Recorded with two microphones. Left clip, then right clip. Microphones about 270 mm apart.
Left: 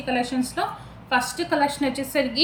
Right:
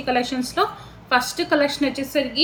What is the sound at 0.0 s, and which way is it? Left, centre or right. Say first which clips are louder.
A woman's voice: right 3 dB; centre.